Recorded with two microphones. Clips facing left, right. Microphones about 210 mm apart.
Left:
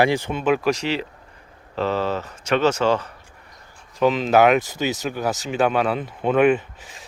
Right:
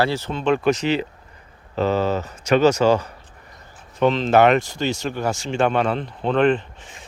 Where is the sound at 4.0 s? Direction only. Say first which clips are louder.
Right 1 dB; 5° left (ahead or behind).